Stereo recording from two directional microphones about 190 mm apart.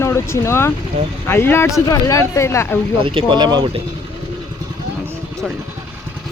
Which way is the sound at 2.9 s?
25° right (ahead or behind).